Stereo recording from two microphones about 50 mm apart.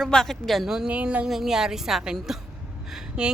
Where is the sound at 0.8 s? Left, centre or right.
Right.